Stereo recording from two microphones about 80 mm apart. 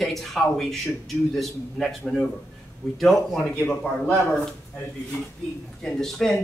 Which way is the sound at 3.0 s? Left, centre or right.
Centre.